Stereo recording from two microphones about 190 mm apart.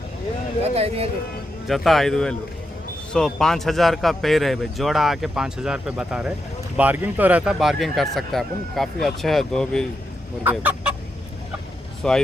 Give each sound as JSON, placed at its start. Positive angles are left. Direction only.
{"t": 0.6, "sound": "speech", "side_deg": -30}
{"t": 1.6, "sound": "speech", "side_deg": 0}
{"t": 10.4, "sound": "chicken", "side_deg": -10}
{"t": 12.0, "sound": "speech", "side_deg": 5}